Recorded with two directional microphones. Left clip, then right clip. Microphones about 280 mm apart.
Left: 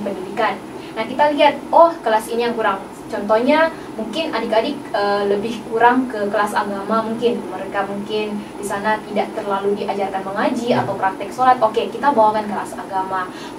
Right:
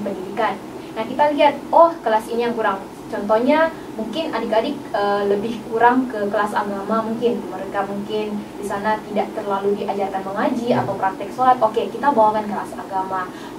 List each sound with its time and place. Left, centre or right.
0.4 s a woman's voice: centre
1.7 s a woman's voice: right
2.0 s a woman's voice: centre